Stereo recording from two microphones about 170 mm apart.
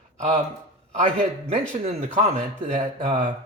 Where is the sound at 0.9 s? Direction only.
40° right (ahead or behind).